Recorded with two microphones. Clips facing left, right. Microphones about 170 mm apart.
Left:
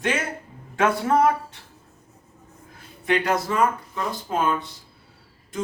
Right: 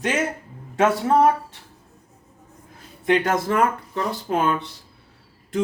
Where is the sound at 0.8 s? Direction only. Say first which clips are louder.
Right 2 dB; 25° right (ahead or behind).